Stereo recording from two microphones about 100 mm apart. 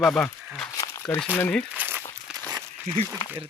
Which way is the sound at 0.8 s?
35° left (ahead or behind).